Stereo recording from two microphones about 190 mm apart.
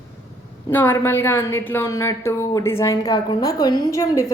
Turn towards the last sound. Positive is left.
turn(degrees=15)  # may be behind; listen again after turning